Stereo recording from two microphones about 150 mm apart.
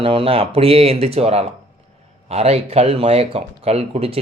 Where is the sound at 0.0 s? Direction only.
35° right (ahead or behind).